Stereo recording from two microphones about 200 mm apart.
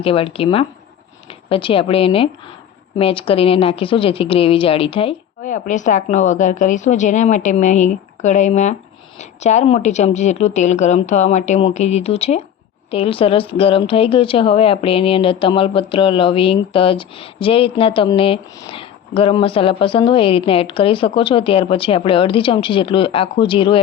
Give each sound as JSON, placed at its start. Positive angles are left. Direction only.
{"t": 0.0, "sound": "a woman's voice", "side_deg": 25}